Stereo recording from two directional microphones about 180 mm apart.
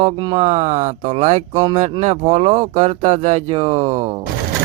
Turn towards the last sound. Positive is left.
turn(degrees=-35)  # may be behind; listen again after turning